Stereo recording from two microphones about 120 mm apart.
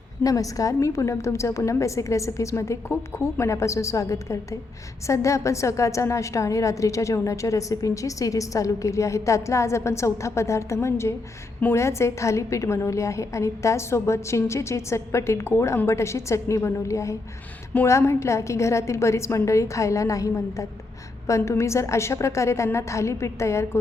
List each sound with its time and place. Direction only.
0.2 s a woman's voice: 30° left (ahead or behind)